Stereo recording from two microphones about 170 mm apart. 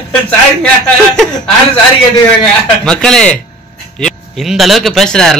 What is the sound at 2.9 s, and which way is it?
A man's voice, 5° left (ahead or behind).